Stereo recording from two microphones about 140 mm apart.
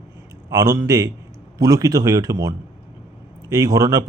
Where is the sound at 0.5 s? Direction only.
25° right (ahead or behind).